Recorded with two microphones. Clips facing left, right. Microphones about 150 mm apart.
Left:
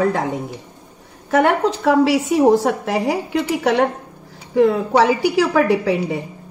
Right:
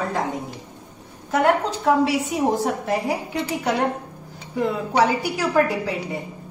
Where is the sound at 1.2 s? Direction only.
80° left.